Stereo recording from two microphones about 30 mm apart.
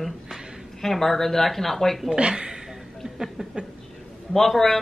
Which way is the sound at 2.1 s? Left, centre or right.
Right.